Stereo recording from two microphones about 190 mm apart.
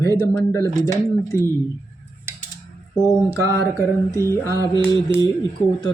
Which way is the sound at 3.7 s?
15° left (ahead or behind).